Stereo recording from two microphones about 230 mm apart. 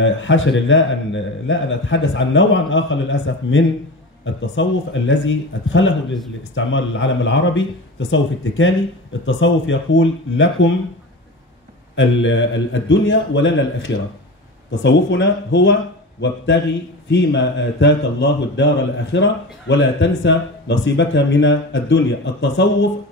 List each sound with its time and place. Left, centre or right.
0.0 s a man's voice: left
11.9 s speech: left
19.7 s speech: left